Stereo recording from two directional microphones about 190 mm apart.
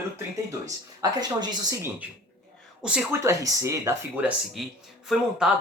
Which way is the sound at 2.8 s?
5° right (ahead or behind).